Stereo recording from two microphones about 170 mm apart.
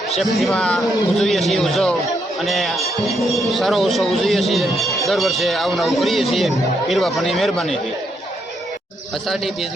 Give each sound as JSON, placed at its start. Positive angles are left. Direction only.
{"t": 0.2, "sound": "a man's voice", "side_deg": 0}
{"t": 9.2, "sound": "a man's voice", "side_deg": 0}